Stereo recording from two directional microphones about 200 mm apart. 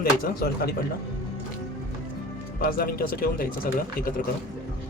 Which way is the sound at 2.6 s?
45° left (ahead or behind).